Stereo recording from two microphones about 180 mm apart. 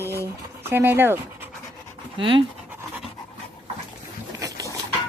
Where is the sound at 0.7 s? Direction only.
10° right (ahead or behind).